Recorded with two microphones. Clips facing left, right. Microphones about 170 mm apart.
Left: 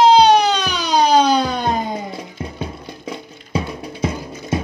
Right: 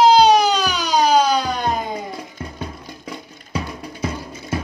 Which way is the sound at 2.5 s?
25° left (ahead or behind).